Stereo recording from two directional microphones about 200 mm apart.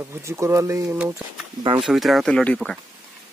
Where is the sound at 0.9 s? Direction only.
5° right (ahead or behind).